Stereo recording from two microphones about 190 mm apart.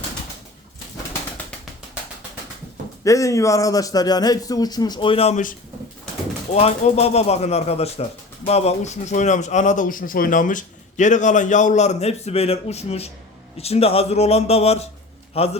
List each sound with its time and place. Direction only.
3.0 s a man's voice: 15° left (ahead or behind); by 15.5 s 30° left (ahead or behind)